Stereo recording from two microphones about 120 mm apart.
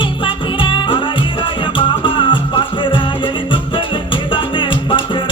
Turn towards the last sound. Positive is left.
turn(degrees=40)  # may be behind; listen again after turning